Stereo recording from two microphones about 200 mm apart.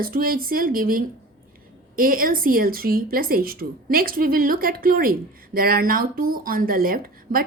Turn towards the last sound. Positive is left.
turn(degrees=-45)  # may be behind; listen again after turning